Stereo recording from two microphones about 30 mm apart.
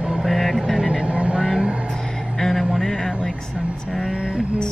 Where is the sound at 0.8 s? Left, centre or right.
Right.